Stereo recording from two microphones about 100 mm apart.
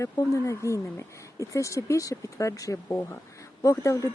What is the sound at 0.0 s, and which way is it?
Speech, 30° left (ahead or behind).